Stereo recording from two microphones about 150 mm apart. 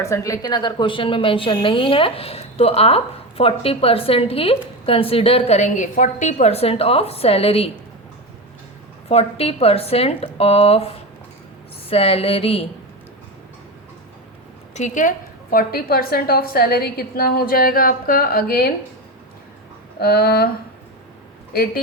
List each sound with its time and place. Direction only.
0.0 s a woman's voice: 20° left (ahead or behind)
0.4 s speech: 30° left (ahead or behind)
9.0 s speech: 40° left (ahead or behind)
14.8 s a woman's voice: 55° left (ahead or behind); by 18.7 s 90° left
20.0 s a sound: 90° left